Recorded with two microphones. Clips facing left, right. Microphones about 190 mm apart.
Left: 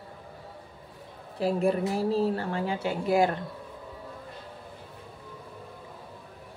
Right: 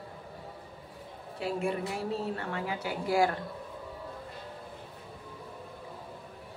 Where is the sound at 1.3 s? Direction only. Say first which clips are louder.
Left 6 dB; 35° left (ahead or behind).